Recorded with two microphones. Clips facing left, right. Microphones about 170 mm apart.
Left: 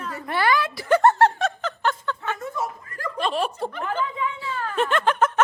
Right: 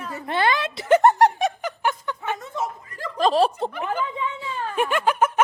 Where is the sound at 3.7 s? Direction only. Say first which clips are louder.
Right 1 dB; 10° right (ahead or behind).